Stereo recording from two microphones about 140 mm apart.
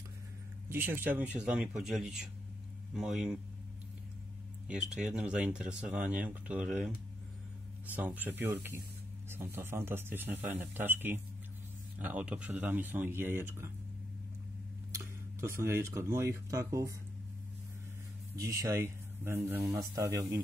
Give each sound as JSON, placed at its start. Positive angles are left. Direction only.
{"t": 0.7, "sound": "speech", "side_deg": -15}
{"t": 4.6, "sound": "speech", "side_deg": -5}
{"t": 15.4, "sound": "speech", "side_deg": -20}
{"t": 18.3, "sound": "speech", "side_deg": -25}